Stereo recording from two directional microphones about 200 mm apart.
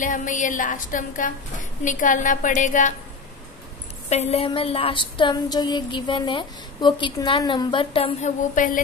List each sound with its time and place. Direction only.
0.0 s a woman's voice: 40° left (ahead or behind)
4.1 s a sound: 30° left (ahead or behind)
8.5 s a woman's voice: 40° left (ahead or behind)